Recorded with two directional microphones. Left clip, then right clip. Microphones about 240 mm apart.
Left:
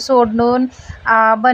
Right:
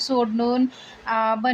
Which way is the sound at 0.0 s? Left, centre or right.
Centre.